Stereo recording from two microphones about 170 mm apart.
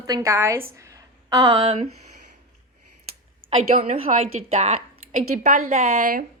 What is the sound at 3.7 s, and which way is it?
A woman's voice, 45° right (ahead or behind).